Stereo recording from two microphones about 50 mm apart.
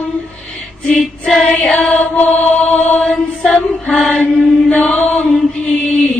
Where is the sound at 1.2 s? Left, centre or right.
Left.